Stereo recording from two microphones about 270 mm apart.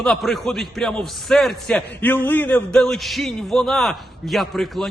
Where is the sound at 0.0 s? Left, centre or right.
Centre.